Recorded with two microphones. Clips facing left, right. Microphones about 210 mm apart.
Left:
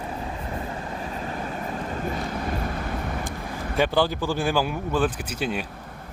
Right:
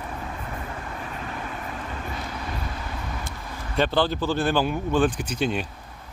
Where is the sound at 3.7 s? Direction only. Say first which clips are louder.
Even; 10° left (ahead or behind).